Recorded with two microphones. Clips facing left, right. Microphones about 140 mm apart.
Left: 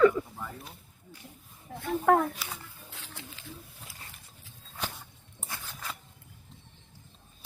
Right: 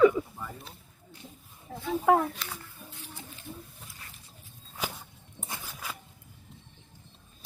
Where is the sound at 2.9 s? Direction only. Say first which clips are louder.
Left 1 dB; 90° left.